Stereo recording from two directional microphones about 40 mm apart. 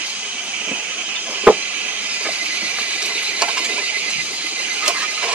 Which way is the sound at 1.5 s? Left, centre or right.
Right.